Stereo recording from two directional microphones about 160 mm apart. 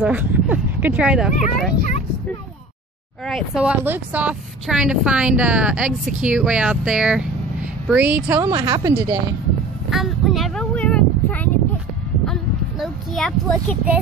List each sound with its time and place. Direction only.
0.0 s a woman's voice: 10° right (ahead or behind)
3.3 s a woman's voice: centre (ahead or behind)
8.5 s speech: 20° right (ahead or behind)
9.8 s a sound: centre (ahead or behind)